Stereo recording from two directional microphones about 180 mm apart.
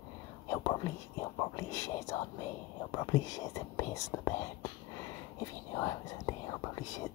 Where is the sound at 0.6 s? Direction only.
20° left (ahead or behind).